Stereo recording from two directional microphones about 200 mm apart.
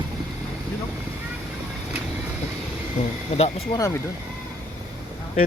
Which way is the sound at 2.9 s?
35° left (ahead or behind).